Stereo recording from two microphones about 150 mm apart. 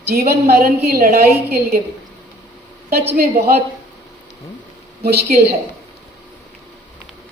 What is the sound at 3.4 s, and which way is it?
Speech, 90° right.